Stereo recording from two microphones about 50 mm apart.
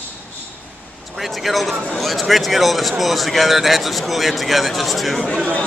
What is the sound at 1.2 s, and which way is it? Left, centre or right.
Speech, centre.